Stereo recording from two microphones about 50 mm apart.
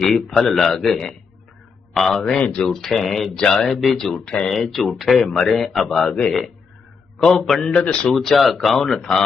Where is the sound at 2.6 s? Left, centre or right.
Centre.